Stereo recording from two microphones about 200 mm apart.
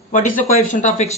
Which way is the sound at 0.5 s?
40° left (ahead or behind).